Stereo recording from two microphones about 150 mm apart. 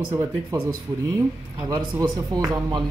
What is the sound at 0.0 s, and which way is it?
Speech, 10° right (ahead or behind).